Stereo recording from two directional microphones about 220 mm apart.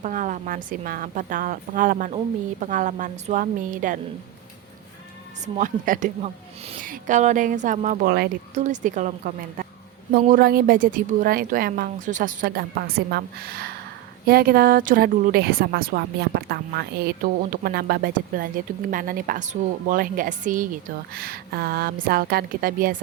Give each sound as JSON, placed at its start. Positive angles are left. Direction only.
{"t": 0.0, "sound": "a woman's voice", "side_deg": -35}
{"t": 5.5, "sound": "a woman's voice", "side_deg": -35}
{"t": 8.5, "sound": "a woman's voice", "side_deg": -35}